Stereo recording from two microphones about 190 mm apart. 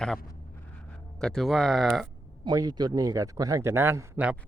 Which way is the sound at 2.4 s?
20° right (ahead or behind).